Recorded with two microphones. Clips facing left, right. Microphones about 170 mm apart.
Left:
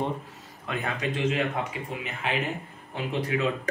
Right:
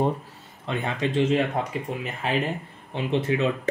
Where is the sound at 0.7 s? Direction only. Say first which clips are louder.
Right 3 dB; 25° right (ahead or behind).